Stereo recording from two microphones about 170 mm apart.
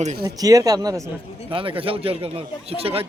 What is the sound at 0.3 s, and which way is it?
Speech, 20° right (ahead or behind).